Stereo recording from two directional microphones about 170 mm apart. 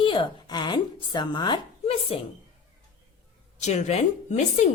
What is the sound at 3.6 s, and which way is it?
Speech, 40° left (ahead or behind).